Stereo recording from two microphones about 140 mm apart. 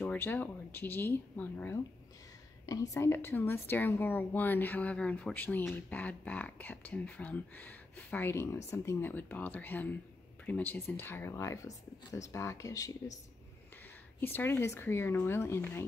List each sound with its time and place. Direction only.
0.0 s a woman's voice: 15° left (ahead or behind)
2.6 s a woman's voice: 25° left (ahead or behind)
14.2 s a woman's voice: 15° left (ahead or behind)